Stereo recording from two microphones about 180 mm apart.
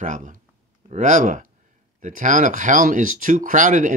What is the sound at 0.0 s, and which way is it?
Speech, 45° right (ahead or behind).